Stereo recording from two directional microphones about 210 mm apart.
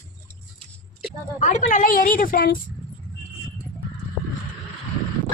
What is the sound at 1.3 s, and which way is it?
A woman's voice, 35° left (ahead or behind).